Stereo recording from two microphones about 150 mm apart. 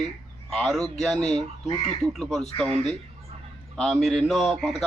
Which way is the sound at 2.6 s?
45° right (ahead or behind).